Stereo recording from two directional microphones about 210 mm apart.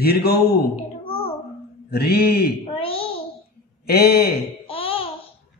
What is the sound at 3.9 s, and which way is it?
Speech, 50° left (ahead or behind).